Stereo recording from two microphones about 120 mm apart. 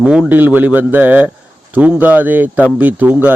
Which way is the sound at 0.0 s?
10° right (ahead or behind).